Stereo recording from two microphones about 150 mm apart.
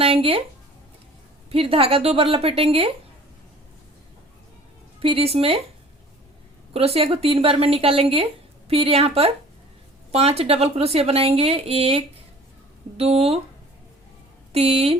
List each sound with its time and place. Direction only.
0.0 s speech: 40° right (ahead or behind)
1.5 s speech: 40° right (ahead or behind)
4.9 s speech: 40° right (ahead or behind)
6.7 s speech: 40° right (ahead or behind)
14.5 s speech: 40° right (ahead or behind)